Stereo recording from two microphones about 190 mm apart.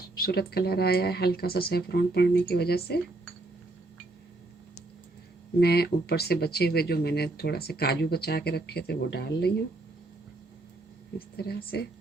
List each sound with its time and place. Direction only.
0.2 s speech: 55° left (ahead or behind)
5.5 s speech: 55° left (ahead or behind)
11.3 s speech: 55° left (ahead or behind)